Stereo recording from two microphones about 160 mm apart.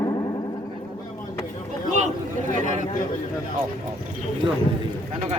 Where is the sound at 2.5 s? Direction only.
50° right (ahead or behind).